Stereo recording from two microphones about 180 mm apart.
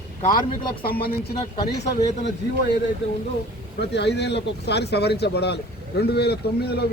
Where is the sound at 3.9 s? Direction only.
70° left (ahead or behind).